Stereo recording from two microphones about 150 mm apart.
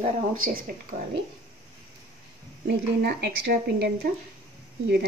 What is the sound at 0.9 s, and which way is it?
Speech, 70° right (ahead or behind).